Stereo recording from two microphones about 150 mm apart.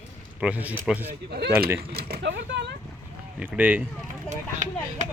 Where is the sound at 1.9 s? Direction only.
90° right.